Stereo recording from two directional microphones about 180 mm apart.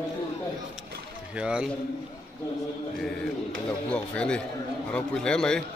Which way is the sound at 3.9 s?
5° left (ahead or behind).